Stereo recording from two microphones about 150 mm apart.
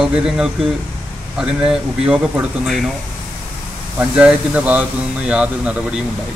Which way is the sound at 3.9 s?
10° right (ahead or behind).